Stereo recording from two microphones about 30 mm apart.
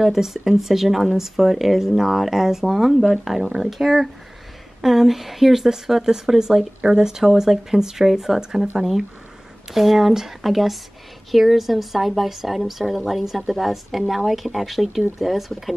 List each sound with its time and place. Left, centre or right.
0.0 s a woman's voice: centre
8.1 s speech: centre
8.4 s speech: centre
9.7 s a woman's voice: centre